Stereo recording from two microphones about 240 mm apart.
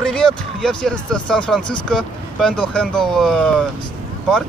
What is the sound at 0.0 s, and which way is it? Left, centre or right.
Speech, centre.